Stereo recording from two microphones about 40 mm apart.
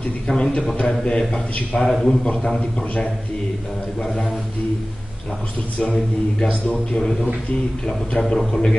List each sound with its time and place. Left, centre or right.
0.3 s a man's voice: left
4.0 s a man's voice: centre
6.4 s a man's voice: left
7.0 s a man's voice: centre